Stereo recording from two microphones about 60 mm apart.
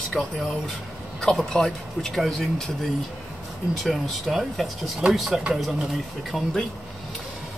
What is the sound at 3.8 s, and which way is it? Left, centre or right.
Speech, centre.